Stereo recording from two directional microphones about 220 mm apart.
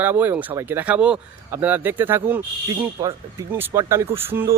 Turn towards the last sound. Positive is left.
turn(degrees=-10)  # may be behind; listen again after turning